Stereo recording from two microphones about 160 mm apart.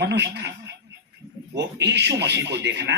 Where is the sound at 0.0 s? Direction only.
90° right.